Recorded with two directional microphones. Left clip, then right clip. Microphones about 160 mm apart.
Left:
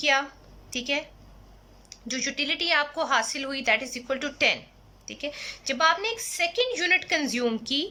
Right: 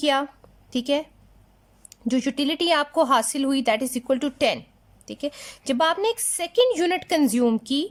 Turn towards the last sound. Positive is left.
turn(degrees=-35)  # may be behind; listen again after turning